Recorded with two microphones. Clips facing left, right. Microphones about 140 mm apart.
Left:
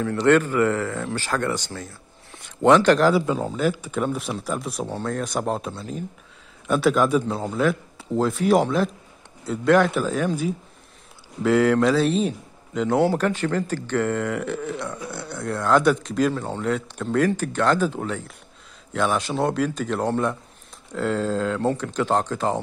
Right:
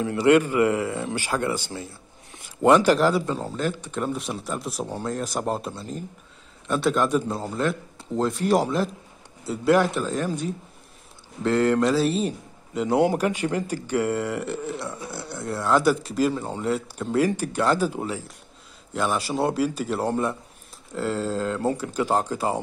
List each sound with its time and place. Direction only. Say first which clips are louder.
0.0 s a man's voice: even; 10° right (ahead or behind)